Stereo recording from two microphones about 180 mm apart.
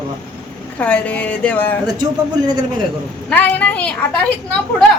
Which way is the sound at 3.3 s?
10° left (ahead or behind).